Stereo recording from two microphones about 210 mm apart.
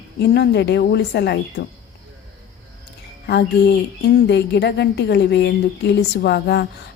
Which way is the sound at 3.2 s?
50° left (ahead or behind).